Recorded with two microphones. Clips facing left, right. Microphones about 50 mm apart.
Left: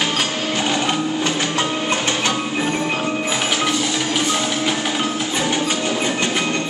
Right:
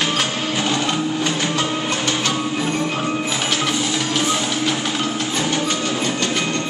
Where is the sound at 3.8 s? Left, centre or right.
Centre.